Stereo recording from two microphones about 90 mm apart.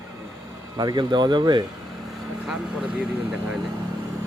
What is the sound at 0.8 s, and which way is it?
Speech, 50° right (ahead or behind).